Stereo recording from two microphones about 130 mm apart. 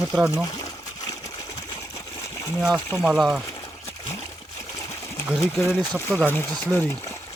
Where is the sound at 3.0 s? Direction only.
Centre (ahead or behind).